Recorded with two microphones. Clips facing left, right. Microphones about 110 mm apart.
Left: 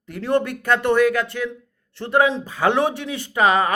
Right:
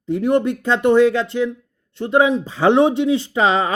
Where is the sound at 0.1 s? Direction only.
20° right (ahead or behind).